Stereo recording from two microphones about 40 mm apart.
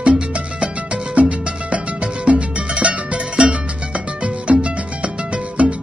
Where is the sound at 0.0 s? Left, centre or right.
Right.